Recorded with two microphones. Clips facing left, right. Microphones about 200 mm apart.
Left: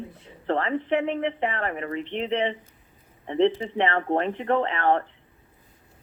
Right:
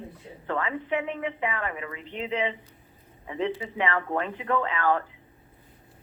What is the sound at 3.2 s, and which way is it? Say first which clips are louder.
Speech: left 8 dB; 30° left (ahead or behind).